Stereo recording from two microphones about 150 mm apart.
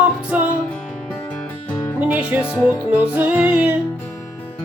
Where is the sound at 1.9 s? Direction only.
10° right (ahead or behind).